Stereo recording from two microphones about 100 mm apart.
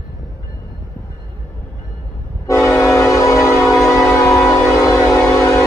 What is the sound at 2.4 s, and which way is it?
Train, 30° left (ahead or behind).